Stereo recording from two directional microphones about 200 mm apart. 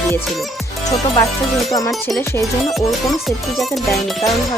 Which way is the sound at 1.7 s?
15° left (ahead or behind).